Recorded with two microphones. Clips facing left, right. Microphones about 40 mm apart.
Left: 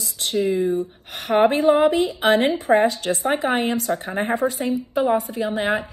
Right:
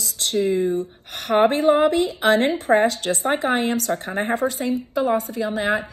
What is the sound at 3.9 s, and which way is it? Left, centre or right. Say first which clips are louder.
Speech: left 1 dB; centre.